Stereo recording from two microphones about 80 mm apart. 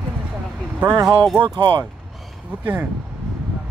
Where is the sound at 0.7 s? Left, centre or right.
Right.